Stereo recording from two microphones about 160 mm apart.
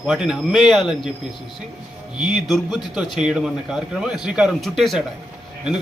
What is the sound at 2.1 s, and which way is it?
A man's voice, 5° right (ahead or behind).